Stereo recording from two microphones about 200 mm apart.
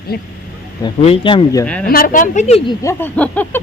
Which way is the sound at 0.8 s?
25° left (ahead or behind).